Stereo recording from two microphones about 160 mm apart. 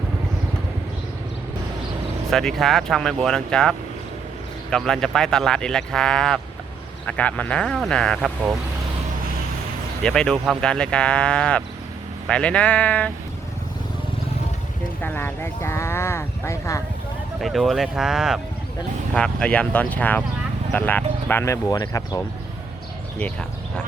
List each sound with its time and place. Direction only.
2.3 s speech: centre (ahead or behind)
10.0 s speech: 5° left (ahead or behind)
15.0 s speech: 15° left (ahead or behind)
17.4 s speech: centre (ahead or behind)
19.1 s speech: 5° left (ahead or behind)
23.1 s speech: 5° left (ahead or behind)